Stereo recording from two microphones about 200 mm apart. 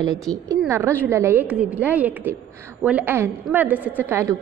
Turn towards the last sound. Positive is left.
turn(degrees=-10)  # may be behind; listen again after turning